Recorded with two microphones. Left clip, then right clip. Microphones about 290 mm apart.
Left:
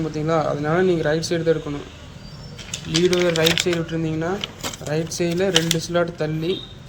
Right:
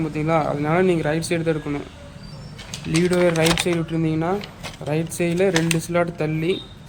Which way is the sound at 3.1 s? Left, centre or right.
Centre.